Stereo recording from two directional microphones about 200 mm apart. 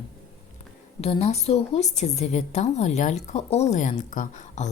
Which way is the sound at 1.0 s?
30° left (ahead or behind).